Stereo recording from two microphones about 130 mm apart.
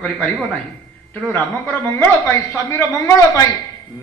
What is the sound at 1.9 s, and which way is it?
A man's voice, 20° left (ahead or behind).